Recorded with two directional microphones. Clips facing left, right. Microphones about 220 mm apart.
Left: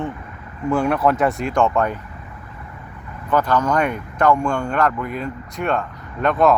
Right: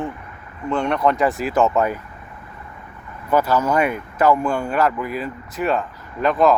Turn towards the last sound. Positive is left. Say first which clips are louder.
# even
turn(degrees=0)  # may be behind; listen again after turning